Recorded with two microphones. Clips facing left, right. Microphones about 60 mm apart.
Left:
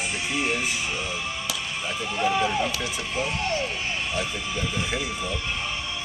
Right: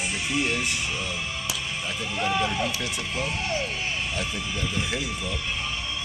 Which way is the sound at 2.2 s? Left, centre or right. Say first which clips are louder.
Left 2 dB; centre.